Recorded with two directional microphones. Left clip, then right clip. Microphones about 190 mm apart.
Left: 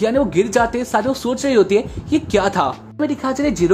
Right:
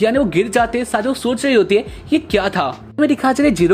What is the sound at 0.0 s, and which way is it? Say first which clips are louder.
Speech: right 1 dB; 5° right (ahead or behind).